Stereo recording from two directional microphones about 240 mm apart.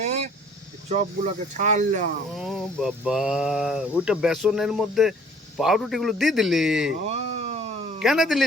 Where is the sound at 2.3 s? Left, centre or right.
Centre.